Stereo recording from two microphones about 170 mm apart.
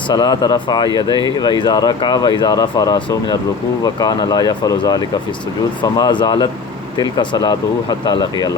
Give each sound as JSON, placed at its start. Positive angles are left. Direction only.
{"t": 0.1, "sound": "speech", "side_deg": 25}